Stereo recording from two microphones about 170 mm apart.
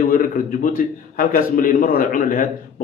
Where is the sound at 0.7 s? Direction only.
55° left (ahead or behind).